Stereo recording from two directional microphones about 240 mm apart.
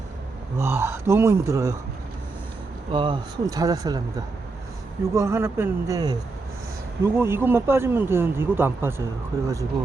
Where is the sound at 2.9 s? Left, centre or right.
Centre.